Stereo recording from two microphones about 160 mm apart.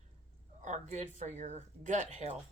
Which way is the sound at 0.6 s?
45° right (ahead or behind).